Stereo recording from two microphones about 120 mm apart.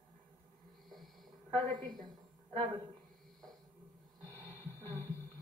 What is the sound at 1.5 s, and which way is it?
Speech, 35° right (ahead or behind).